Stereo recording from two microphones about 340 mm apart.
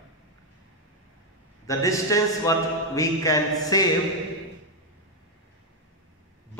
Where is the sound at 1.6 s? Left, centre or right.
Centre.